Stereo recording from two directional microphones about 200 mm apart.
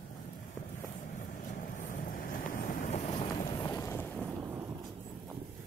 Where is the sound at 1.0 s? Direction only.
40° left (ahead or behind); by 4.2 s 10° left (ahead or behind).